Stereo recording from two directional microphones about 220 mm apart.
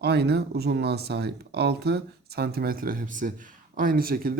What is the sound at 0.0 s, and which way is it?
Speech, 50° right (ahead or behind).